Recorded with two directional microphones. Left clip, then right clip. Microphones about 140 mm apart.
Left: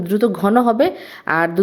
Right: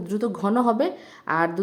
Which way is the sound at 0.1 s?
20° left (ahead or behind).